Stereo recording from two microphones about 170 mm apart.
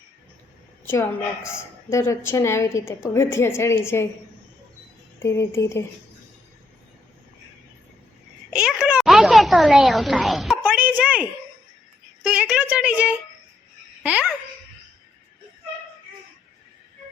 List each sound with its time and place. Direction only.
0.9 s a woman's voice: 15° left (ahead or behind)
5.2 s a woman's voice: 15° left (ahead or behind)
8.4 s a sound: 5° right (ahead or behind)
12.2 s a woman's voice: 5° right (ahead or behind)